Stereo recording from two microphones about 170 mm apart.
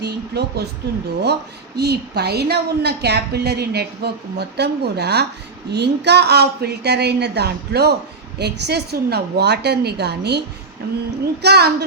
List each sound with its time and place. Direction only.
0.0 s a woman's voice: 75° right (ahead or behind)
11.4 s a woman's voice: 70° right (ahead or behind)